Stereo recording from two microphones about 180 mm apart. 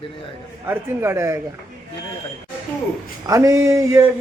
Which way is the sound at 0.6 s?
15° right (ahead or behind).